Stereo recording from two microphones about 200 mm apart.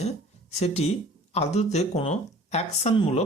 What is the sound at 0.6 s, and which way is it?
Speech, 30° left (ahead or behind).